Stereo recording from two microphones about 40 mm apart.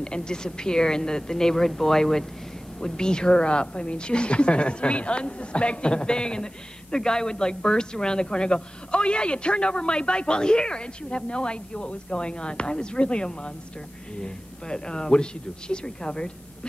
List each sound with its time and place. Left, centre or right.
0.0 s a woman's voice: left